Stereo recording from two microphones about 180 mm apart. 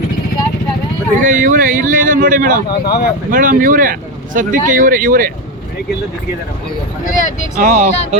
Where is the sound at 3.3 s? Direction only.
50° right (ahead or behind).